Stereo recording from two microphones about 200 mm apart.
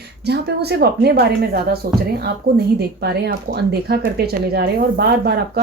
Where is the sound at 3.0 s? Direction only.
55° right (ahead or behind).